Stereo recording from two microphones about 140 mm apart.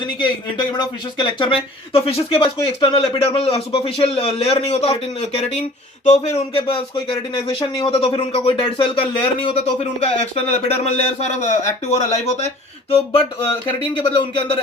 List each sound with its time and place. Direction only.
0.5 s speech: 35° left (ahead or behind)
10.0 s speech: 50° left (ahead or behind)
14.0 s speech: 35° left (ahead or behind)